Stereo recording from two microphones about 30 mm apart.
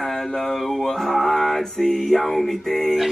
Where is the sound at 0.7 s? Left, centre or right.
Centre.